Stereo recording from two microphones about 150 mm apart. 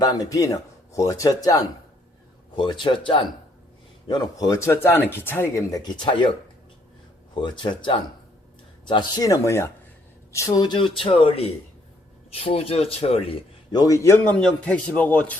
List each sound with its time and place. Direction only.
0.0 s speech: 25° left (ahead or behind)
7.4 s speech: 30° left (ahead or behind)
13.7 s speech: 25° left (ahead or behind)
14.3 s a man's voice: 5° left (ahead or behind)